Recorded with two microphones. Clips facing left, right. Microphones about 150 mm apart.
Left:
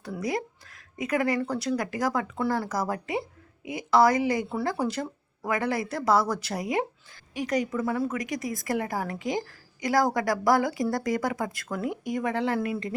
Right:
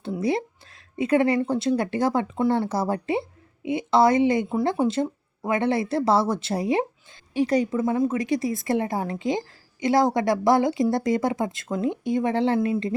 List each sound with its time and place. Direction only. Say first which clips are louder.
0.0 s a woman's voice: right 5 dB; 25° right (ahead or behind)